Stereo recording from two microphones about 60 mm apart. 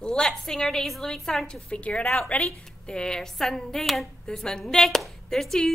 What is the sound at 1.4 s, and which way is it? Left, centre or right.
A woman's voice, centre.